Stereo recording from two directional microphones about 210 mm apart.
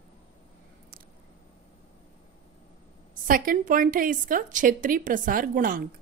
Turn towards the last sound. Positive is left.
turn(degrees=-40)  # may be behind; listen again after turning